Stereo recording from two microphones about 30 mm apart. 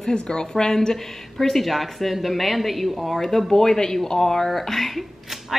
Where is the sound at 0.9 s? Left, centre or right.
Centre.